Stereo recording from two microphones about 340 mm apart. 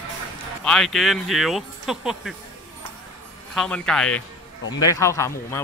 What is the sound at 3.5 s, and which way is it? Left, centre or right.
Speech, centre.